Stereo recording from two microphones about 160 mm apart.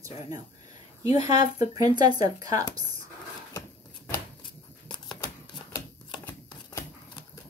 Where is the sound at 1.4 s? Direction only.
25° right (ahead or behind).